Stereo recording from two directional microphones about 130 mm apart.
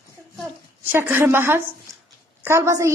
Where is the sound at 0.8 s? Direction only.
15° right (ahead or behind).